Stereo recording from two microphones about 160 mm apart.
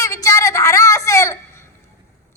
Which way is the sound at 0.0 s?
20° left (ahead or behind).